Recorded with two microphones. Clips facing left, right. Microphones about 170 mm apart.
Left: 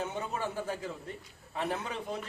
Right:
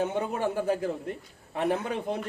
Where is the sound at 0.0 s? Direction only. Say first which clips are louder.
Right 7 dB; 60° right (ahead or behind).